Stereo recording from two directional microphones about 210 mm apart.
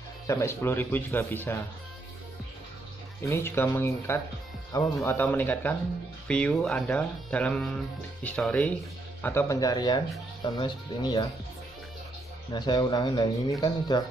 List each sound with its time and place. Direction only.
0.3 s speech: 15° left (ahead or behind)
3.3 s speech: 10° left (ahead or behind)
12.5 s speech: 20° left (ahead or behind)